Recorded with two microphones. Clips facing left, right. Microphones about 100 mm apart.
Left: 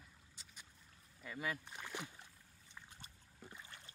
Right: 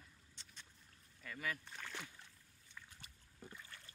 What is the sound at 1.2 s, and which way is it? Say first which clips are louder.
Speech: left 2 dB; 20° left (ahead or behind).